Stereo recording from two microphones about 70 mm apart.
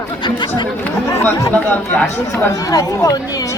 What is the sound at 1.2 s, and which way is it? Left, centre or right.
Speech, left.